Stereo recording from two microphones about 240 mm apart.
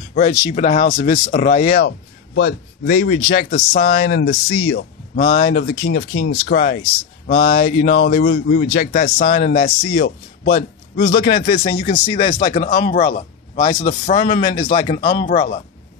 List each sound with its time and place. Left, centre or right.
0.1 s speech: left
0.4 s speech: centre
0.7 s a man's voice: left
1.9 s a man's voice: left
15.0 s a man's voice: left